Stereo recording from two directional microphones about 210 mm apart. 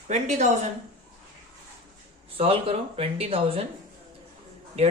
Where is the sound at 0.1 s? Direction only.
35° right (ahead or behind).